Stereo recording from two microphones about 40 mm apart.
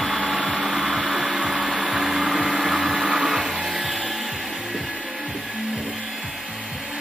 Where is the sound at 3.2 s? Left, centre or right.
Centre.